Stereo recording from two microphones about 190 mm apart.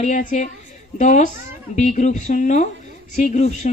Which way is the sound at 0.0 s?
40° left (ahead or behind).